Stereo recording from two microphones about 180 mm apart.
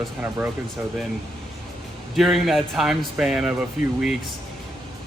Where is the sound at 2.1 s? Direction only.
Centre (ahead or behind).